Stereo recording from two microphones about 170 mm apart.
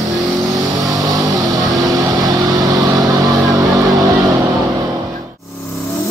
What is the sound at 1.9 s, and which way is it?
Vehicle, 20° right (ahead or behind).